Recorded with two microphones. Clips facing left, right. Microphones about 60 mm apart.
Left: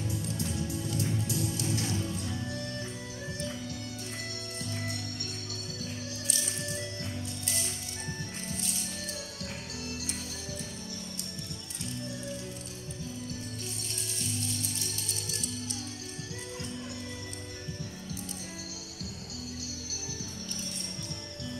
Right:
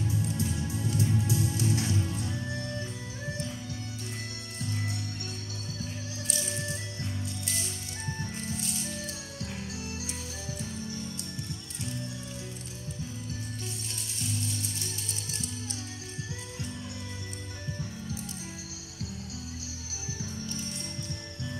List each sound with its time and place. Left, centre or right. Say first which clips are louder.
0.1 s music: right 3 dB; right
9.4 s music: right 2 dB; right